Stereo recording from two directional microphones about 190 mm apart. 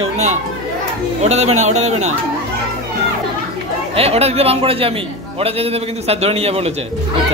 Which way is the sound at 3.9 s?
30° right (ahead or behind).